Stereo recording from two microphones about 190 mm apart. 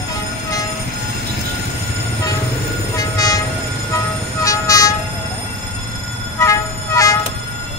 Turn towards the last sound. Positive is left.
turn(degrees=15)  # may be behind; listen again after turning